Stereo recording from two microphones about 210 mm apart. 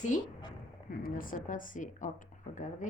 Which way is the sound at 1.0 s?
40° left (ahead or behind).